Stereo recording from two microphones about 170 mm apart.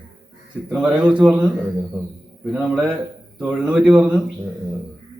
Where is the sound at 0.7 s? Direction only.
5° right (ahead or behind).